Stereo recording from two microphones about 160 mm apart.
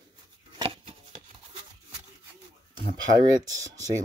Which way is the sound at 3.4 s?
20° right (ahead or behind).